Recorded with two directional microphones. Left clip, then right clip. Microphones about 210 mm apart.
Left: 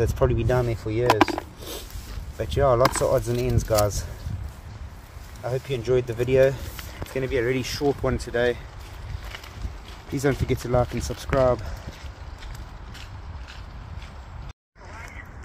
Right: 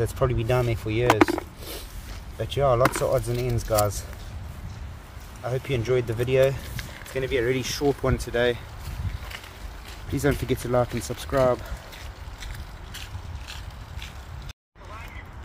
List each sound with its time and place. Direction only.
0.0 s speech: 10° left (ahead or behind)
0.8 s speech: 30° left (ahead or behind)
2.3 s speech: 15° left (ahead or behind)
5.4 s speech: 10° left (ahead or behind)
10.1 s speech: 5° left (ahead or behind)